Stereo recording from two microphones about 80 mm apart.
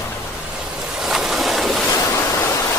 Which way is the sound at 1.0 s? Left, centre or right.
Centre.